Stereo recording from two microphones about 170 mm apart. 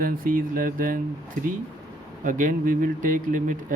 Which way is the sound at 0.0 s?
55° right (ahead or behind).